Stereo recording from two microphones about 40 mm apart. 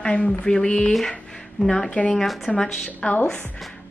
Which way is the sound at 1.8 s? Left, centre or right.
Left.